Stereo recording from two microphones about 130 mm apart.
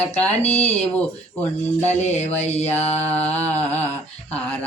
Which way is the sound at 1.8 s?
60° left (ahead or behind).